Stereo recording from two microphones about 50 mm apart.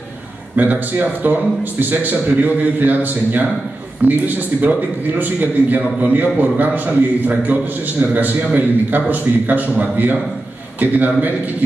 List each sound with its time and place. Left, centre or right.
0.6 s a man's voice: right